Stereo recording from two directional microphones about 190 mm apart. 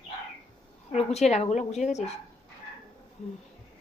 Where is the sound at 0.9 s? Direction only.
35° left (ahead or behind).